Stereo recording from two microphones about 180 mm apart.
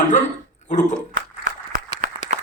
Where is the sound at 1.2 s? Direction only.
50° right (ahead or behind).